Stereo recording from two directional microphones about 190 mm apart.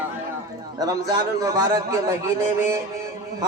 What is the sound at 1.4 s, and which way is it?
Speech, 20° right (ahead or behind).